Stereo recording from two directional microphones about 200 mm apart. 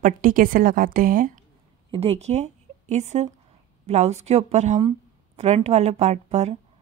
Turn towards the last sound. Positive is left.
turn(degrees=-35)  # may be behind; listen again after turning